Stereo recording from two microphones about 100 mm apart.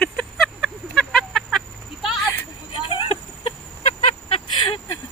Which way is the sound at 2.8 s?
60° left (ahead or behind).